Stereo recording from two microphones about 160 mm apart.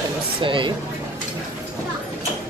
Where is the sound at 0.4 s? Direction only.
30° right (ahead or behind).